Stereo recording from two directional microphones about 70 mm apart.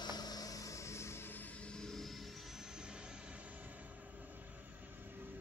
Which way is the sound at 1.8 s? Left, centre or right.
Centre.